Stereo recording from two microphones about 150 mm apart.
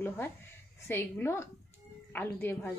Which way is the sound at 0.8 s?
15° left (ahead or behind).